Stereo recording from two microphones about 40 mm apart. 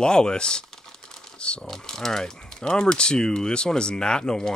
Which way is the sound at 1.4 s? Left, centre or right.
Left.